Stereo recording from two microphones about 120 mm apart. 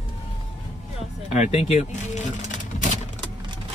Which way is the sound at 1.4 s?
70° left (ahead or behind).